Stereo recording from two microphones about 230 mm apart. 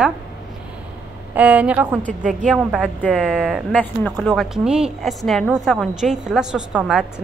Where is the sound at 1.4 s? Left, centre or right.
Centre.